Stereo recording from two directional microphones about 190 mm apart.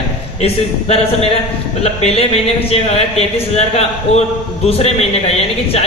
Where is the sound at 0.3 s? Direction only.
35° left (ahead or behind).